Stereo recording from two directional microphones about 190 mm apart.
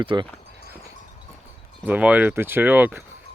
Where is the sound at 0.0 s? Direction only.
25° right (ahead or behind).